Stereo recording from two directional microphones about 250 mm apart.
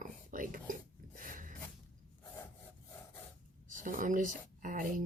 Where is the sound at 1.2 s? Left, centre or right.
Right.